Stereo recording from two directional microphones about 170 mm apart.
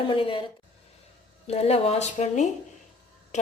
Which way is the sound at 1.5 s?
35° left (ahead or behind).